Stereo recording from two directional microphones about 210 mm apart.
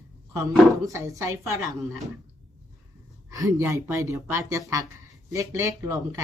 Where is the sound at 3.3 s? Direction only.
15° right (ahead or behind).